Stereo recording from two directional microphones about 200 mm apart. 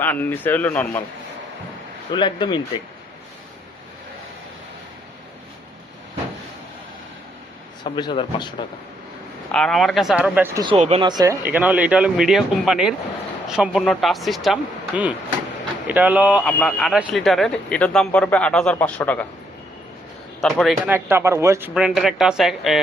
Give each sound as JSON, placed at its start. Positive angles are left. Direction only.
{"t": 0.0, "sound": "speech", "side_deg": 10}
{"t": 2.0, "sound": "speech", "side_deg": 25}
{"t": 7.9, "sound": "speech", "side_deg": 25}
{"t": 9.5, "sound": "speech", "side_deg": 5}
{"t": 10.8, "sound": "speech", "side_deg": -30}
{"t": 11.4, "sound": "speech", "side_deg": -5}
{"t": 20.4, "sound": "speech", "side_deg": 0}
{"t": 20.9, "sound": "speech", "side_deg": -10}